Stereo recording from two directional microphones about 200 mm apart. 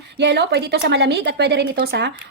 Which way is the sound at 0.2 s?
55° right (ahead or behind).